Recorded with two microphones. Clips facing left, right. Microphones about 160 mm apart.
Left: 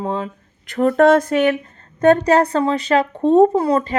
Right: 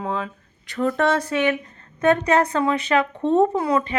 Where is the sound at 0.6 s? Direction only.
55° left (ahead or behind).